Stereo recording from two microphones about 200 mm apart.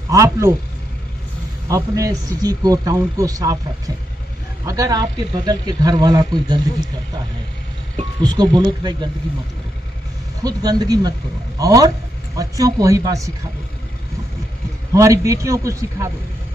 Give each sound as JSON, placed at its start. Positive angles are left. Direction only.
{"t": 0.1, "sound": "speech", "side_deg": -15}
{"t": 1.7, "sound": "speech", "side_deg": -15}
{"t": 8.2, "sound": "speech", "side_deg": -20}
{"t": 10.4, "sound": "speech", "side_deg": -20}
{"t": 14.9, "sound": "speech", "side_deg": -15}